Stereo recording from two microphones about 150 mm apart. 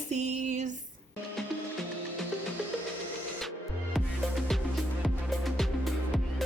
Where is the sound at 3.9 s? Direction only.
Centre (ahead or behind).